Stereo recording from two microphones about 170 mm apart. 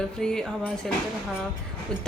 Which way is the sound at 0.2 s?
5° left (ahead or behind).